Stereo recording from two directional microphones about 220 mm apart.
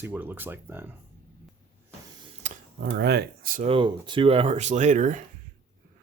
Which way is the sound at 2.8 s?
50° right (ahead or behind).